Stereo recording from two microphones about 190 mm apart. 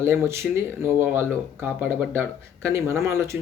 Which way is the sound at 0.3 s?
15° right (ahead or behind).